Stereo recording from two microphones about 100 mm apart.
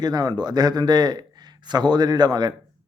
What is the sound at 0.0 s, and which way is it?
Speech, 45° right (ahead or behind).